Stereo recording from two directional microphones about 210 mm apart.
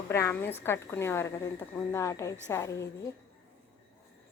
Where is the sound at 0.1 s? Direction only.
10° left (ahead or behind).